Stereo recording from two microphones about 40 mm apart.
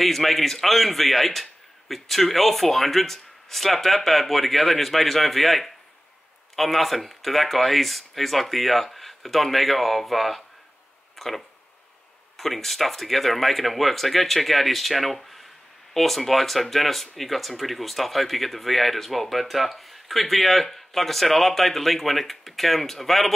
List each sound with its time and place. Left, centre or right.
0.0 s speech: centre